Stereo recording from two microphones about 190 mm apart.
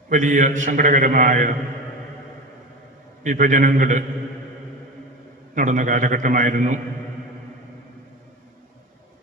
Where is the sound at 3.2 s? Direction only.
40° right (ahead or behind).